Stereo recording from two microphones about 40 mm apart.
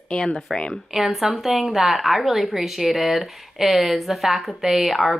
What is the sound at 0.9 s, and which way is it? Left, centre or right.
Speech, centre.